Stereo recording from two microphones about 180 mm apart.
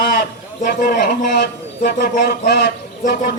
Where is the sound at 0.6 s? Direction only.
50° left (ahead or behind).